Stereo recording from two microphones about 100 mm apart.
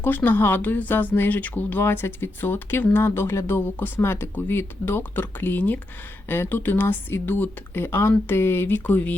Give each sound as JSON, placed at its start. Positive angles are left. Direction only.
{"t": 0.0, "sound": "speech", "side_deg": 20}